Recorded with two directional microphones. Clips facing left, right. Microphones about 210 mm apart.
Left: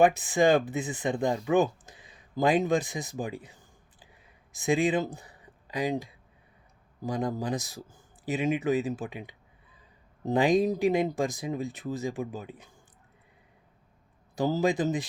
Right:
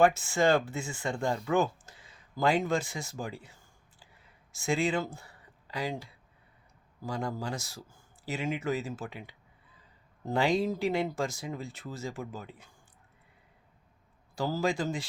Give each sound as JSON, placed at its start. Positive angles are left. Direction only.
{"t": 0.0, "sound": "speech", "side_deg": 15}
{"t": 1.5, "sound": "a sound", "side_deg": 15}
{"t": 7.0, "sound": "speech", "side_deg": 20}
{"t": 14.3, "sound": "speech", "side_deg": 20}